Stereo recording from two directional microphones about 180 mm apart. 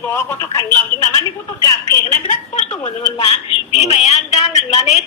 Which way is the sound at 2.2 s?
45° left (ahead or behind).